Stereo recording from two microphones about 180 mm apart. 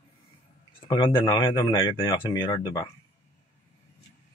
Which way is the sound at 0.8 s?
25° left (ahead or behind).